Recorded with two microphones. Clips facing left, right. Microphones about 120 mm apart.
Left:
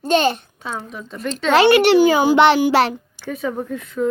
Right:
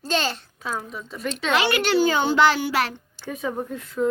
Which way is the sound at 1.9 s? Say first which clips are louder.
Left 6 dB; 10° left (ahead or behind).